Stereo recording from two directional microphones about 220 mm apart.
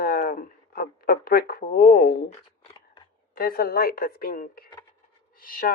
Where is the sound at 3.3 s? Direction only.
40° left (ahead or behind).